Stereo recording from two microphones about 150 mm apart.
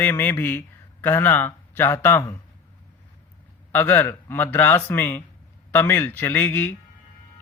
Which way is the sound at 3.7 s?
15° left (ahead or behind).